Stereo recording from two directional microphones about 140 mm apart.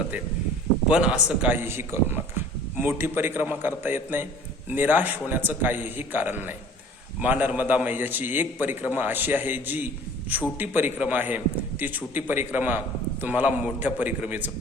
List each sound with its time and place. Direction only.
0.9 s a man's voice: 10° right (ahead or behind)